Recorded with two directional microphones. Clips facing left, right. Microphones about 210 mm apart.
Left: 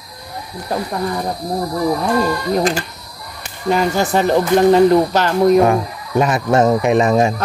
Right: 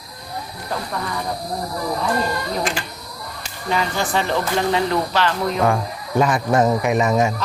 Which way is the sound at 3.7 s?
45° left (ahead or behind).